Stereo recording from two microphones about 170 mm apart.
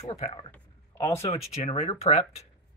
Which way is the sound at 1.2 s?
35° left (ahead or behind).